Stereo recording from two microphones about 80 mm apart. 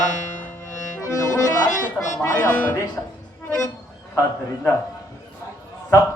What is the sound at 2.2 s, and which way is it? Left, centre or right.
Music, left.